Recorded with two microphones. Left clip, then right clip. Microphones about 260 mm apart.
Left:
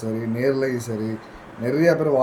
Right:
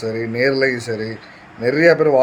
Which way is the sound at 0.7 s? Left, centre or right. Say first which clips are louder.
Right 6 dB; right.